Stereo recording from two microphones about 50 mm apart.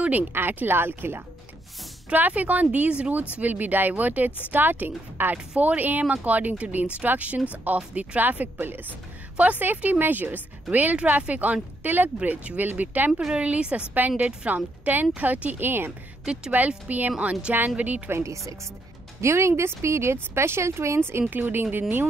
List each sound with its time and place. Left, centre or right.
0.3 s speech: right
2.1 s speech: right
13.1 s a woman's voice: centre
13.4 s a woman's voice: right
15.6 s speech: right
16.5 s a woman's voice: right
18.1 s speech: right
19.2 s speech: right
21.3 s speech: right
21.6 s a woman's voice: right